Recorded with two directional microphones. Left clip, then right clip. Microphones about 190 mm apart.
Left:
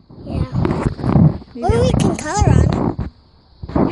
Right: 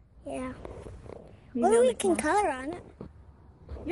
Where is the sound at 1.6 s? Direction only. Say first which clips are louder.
Left 5 dB; centre (ahead or behind).